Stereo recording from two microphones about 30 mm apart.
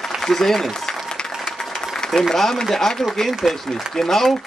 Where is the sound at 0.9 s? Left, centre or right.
Left.